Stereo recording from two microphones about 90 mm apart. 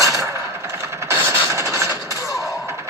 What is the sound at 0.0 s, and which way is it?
Coin, 35° right (ahead or behind).